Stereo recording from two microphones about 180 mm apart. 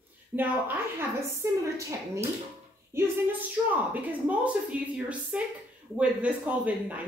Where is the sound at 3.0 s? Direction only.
15° right (ahead or behind).